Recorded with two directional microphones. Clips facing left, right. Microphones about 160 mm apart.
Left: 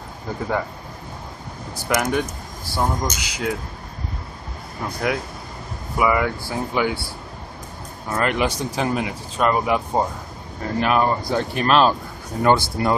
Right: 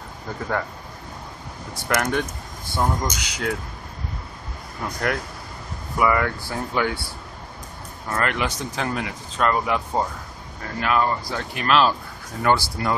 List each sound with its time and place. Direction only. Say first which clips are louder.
1.9 s speech: left 2 dB; 5° left (ahead or behind)
4.8 s speech: left 2 dB; 10° left (ahead or behind)
8.1 s speech: left 3 dB; 15° left (ahead or behind)
11.5 s speech: left 2 dB; 40° left (ahead or behind)
12.4 s speech: left 3 dB; 25° left (ahead or behind)